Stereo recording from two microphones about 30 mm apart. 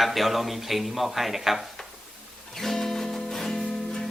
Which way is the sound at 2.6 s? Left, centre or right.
Centre.